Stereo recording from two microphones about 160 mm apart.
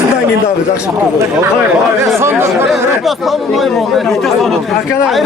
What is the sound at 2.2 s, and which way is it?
Speech, 15° right (ahead or behind).